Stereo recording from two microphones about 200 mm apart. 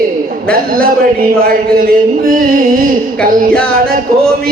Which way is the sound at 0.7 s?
45° right (ahead or behind).